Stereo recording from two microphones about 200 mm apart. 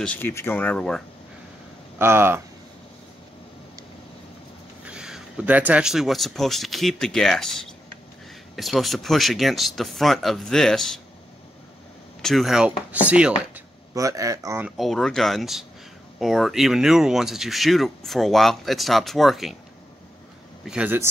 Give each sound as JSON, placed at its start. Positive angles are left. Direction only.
{"t": 0.0, "sound": "speech", "side_deg": 10}
{"t": 2.0, "sound": "a man's voice", "side_deg": -10}
{"t": 4.8, "sound": "speech", "side_deg": -5}
{"t": 12.2, "sound": "a man's voice", "side_deg": 0}
{"t": 14.8, "sound": "speech", "side_deg": 0}
{"t": 20.6, "sound": "a man's voice", "side_deg": -5}